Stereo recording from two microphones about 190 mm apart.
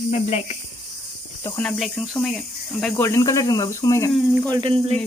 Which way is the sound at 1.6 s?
5° left (ahead or behind).